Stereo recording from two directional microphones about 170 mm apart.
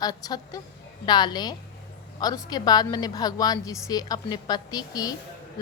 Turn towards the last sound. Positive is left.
turn(degrees=20)  # may be behind; listen again after turning